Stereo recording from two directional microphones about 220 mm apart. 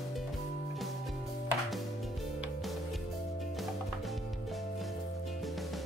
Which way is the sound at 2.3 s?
Centre (ahead or behind).